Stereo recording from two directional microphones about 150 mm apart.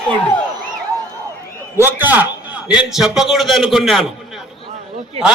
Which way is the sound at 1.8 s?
15° right (ahead or behind).